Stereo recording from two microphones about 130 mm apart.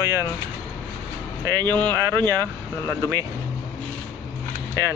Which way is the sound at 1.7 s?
15° left (ahead or behind).